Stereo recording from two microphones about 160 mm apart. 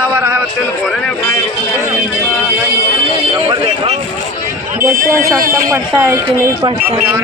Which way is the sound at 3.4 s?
30° right (ahead or behind).